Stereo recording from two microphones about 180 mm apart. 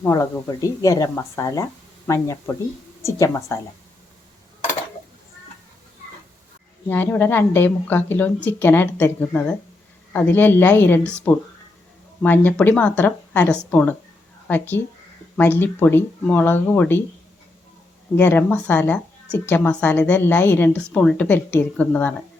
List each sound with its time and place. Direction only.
0.0 s a woman's voice: 20° left (ahead or behind)
6.8 s a woman's voice: 10° left (ahead or behind)
18.2 s a woman's voice: 10° left (ahead or behind)